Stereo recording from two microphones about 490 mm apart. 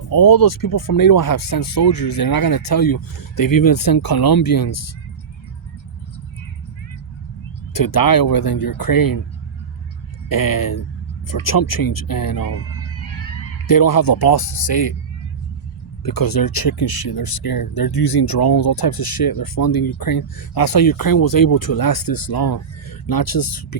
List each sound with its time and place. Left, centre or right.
0.1 s speech: left
7.7 s speech: left
10.2 s speech: left
12.8 s a sound: left
13.7 s speech: left
16.0 s speech: left
17.9 s speech: left
18.2 s speech: left